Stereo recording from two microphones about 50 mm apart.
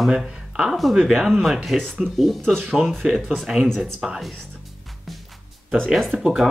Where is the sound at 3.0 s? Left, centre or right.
Centre.